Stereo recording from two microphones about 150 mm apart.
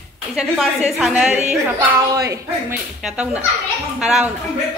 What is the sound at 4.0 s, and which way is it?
Speech, centre (ahead or behind).